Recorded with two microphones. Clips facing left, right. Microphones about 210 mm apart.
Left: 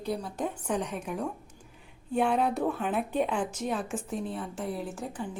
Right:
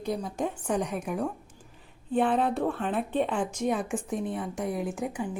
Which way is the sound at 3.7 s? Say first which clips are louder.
Right 3 dB; 15° right (ahead or behind).